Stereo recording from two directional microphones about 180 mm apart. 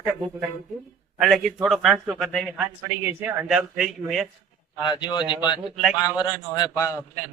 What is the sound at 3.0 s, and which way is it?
A man's voice, 15° right (ahead or behind).